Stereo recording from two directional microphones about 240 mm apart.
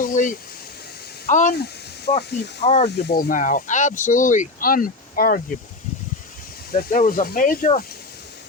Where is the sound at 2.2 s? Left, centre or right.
Left.